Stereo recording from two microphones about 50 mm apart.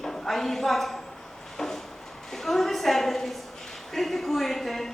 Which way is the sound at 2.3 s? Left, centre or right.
Centre.